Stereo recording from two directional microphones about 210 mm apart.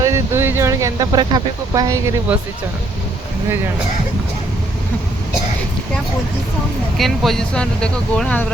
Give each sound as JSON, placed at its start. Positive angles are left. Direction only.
{"t": 0.0, "sound": "speech", "side_deg": -10}
{"t": 6.9, "sound": "speech", "side_deg": 0}